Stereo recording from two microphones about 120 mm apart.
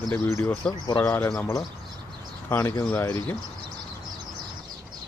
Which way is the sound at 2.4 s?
20° left (ahead or behind).